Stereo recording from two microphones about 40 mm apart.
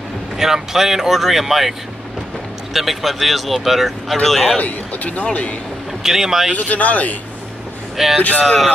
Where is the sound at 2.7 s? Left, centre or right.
Centre.